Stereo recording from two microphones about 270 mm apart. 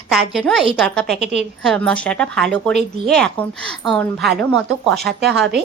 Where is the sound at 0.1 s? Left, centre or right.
Centre.